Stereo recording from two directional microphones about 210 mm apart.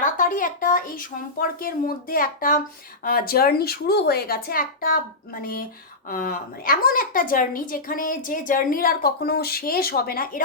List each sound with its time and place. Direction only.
0.0 s speech: 40° left (ahead or behind)